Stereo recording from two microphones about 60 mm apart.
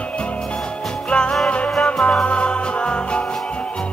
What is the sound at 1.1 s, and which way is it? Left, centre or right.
Music, centre.